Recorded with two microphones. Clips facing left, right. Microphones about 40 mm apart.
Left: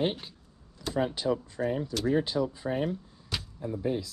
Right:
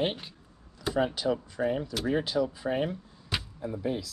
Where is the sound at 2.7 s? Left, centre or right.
Right.